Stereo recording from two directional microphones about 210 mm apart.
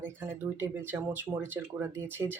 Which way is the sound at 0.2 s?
10° right (ahead or behind).